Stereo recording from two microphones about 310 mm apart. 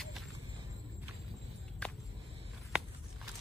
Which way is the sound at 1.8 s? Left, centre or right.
Centre.